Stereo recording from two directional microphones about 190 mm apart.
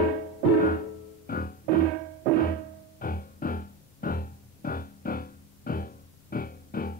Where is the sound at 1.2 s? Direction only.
50° left (ahead or behind).